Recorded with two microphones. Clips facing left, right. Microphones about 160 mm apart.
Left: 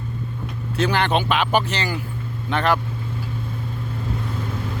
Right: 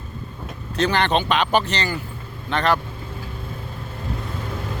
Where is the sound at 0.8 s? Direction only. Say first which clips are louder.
Even; 10° left (ahead or behind).